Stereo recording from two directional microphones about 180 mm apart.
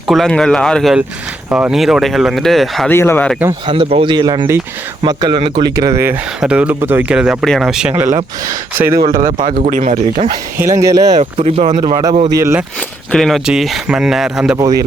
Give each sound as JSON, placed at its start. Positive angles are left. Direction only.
{"t": 0.1, "sound": "speech", "side_deg": 0}
{"t": 1.5, "sound": "speech", "side_deg": -10}
{"t": 1.7, "sound": "speech", "side_deg": 0}
{"t": 2.9, "sound": "speech", "side_deg": 15}
{"t": 3.9, "sound": "speech", "side_deg": -25}
{"t": 6.4, "sound": "speech", "side_deg": -5}
{"t": 8.4, "sound": "speech", "side_deg": -15}
{"t": 9.1, "sound": "speech", "side_deg": -50}
{"t": 10.6, "sound": "speech", "side_deg": -15}
{"t": 11.2, "sound": "speech", "side_deg": -35}
{"t": 11.8, "sound": "speech", "side_deg": -20}
{"t": 13.1, "sound": "speech", "side_deg": 0}